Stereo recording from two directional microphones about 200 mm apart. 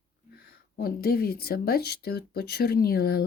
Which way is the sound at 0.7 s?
50° left (ahead or behind).